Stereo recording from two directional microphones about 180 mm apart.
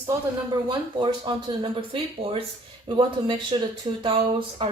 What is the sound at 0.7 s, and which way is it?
Speech, 25° right (ahead or behind).